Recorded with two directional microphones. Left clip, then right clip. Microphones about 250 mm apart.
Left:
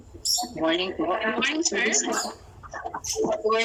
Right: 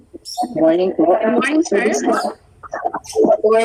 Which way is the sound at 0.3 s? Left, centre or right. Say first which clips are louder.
Right 12 dB; right.